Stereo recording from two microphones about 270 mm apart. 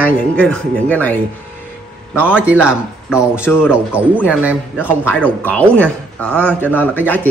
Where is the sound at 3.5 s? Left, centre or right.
Centre.